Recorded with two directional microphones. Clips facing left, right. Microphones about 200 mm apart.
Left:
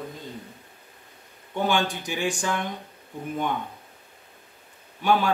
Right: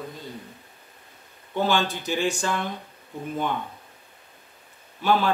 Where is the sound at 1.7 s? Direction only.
15° left (ahead or behind).